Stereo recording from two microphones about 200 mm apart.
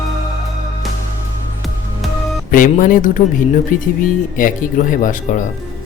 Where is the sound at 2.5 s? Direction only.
40° left (ahead or behind).